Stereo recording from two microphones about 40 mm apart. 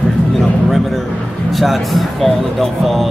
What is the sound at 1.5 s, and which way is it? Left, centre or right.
Speech, centre.